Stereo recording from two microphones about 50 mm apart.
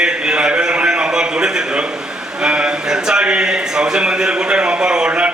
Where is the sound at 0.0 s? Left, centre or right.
Centre.